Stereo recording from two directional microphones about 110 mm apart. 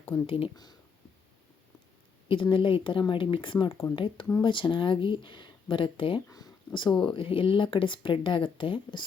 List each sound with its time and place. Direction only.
0.3 s speech: 55° left (ahead or behind)
0.5 s speech: 40° left (ahead or behind)
2.2 s speech: 50° left (ahead or behind)